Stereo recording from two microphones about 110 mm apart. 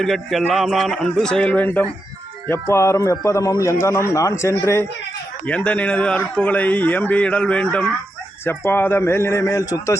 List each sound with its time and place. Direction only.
0.0 s a man's voice: centre (ahead or behind); by 4.9 s 25° left (ahead or behind)
5.5 s a man's voice: 10° left (ahead or behind)
8.4 s a man's voice: 20° left (ahead or behind)